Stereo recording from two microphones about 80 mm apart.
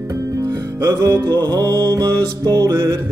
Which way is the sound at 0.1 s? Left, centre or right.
Right.